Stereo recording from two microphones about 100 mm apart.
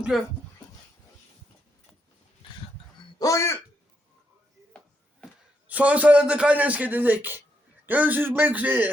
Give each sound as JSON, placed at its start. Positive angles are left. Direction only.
{"t": 0.1, "sound": "speech", "side_deg": -5}
{"t": 3.2, "sound": "speech", "side_deg": 30}
{"t": 5.6, "sound": "a man's voice", "side_deg": -15}